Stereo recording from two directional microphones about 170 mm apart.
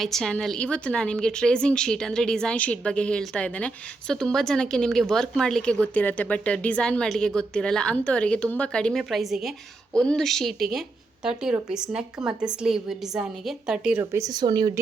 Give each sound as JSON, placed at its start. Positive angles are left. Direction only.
{"t": 0.0, "sound": "a woman's voice", "side_deg": 0}